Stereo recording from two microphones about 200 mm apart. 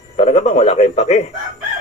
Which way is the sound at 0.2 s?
35° left (ahead or behind).